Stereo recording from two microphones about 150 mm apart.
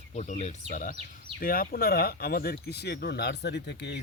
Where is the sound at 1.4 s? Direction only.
75° left (ahead or behind).